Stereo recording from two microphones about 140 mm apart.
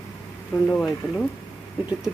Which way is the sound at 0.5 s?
5° right (ahead or behind).